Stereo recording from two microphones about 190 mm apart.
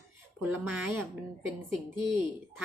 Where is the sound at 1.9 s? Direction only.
25° left (ahead or behind).